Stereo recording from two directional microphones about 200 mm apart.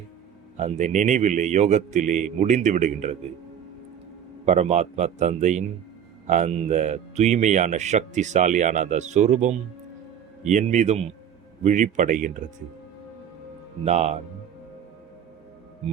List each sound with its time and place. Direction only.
0.5 s speech: 35° right (ahead or behind)
4.4 s speech: 35° right (ahead or behind)
13.8 s speech: 35° right (ahead or behind)